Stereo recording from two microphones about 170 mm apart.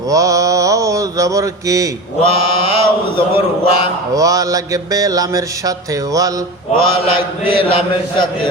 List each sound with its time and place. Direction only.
0.1 s mantra: 20° right (ahead or behind)
2.2 s mantra: 30° left (ahead or behind)
4.1 s mantra: 20° right (ahead or behind)
6.7 s mantra: 30° left (ahead or behind)